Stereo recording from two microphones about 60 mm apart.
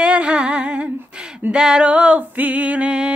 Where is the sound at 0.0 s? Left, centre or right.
Centre.